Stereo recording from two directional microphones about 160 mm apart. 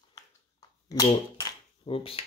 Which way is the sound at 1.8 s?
35° left (ahead or behind).